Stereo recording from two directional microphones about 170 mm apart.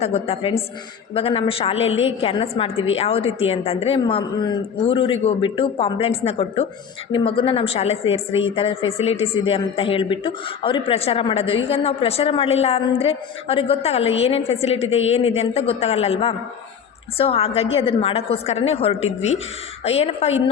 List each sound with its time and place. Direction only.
0.0 s a woman's voice: 40° left (ahead or behind)